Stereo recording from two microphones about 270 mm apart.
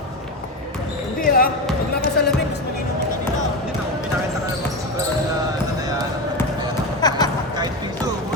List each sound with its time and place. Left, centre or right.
1.2 s basketball bounce: left
2.2 s music: left
7.0 s a sound: centre